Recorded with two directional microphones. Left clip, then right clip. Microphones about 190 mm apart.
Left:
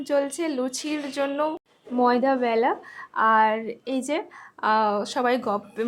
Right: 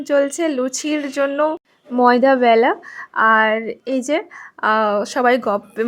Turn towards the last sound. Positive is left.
turn(degrees=-25)  # may be behind; listen again after turning